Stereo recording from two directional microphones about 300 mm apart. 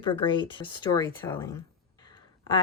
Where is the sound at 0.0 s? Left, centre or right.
Centre.